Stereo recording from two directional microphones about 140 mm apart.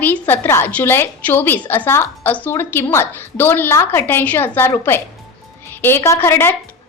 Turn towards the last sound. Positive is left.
turn(degrees=15)  # may be behind; listen again after turning